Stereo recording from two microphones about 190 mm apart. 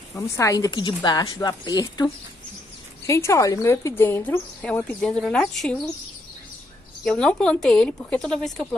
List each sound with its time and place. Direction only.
0.1 s a woman's voice: 15° left (ahead or behind)
3.1 s speech: 15° left (ahead or behind)
7.1 s speech: 5° left (ahead or behind)